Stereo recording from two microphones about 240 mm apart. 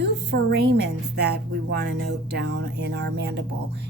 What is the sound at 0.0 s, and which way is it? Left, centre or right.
A woman's voice, right.